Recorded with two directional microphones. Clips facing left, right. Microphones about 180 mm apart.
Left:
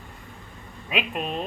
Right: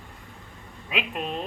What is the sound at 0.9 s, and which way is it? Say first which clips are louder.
Speech: left 2 dB; 20° left (ahead or behind).